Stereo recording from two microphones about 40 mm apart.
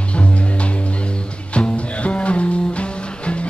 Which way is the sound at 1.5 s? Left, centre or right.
Left.